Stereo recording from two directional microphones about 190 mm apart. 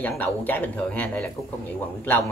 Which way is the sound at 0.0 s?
10° left (ahead or behind).